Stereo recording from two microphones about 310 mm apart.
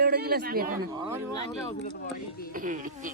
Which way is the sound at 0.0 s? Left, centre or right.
Right.